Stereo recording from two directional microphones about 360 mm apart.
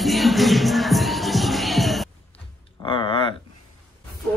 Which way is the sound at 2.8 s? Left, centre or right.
Centre.